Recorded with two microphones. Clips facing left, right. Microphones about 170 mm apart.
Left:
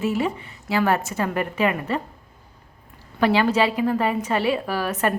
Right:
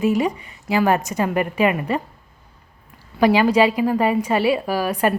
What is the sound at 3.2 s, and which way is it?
A woman's voice, 10° right (ahead or behind).